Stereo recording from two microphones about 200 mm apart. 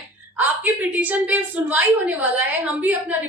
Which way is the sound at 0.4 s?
10° right (ahead or behind).